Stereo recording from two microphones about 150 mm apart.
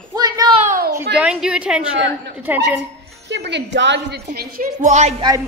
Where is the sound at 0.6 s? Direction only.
60° right (ahead or behind).